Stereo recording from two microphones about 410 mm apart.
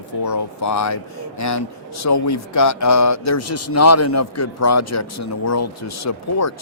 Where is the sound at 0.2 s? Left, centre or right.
Left.